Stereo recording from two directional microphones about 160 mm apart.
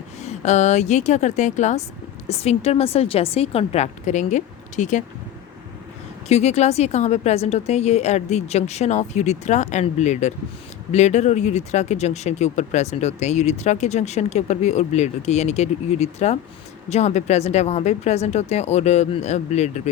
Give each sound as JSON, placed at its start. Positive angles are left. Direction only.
{"t": 0.2, "sound": "a woman's voice", "side_deg": 45}
{"t": 6.2, "sound": "speech", "side_deg": 45}